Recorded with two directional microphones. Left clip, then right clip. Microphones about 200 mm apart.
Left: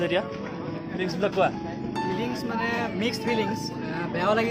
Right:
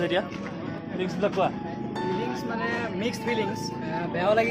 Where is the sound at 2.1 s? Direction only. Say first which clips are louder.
Left 1 dB; 25° left (ahead or behind).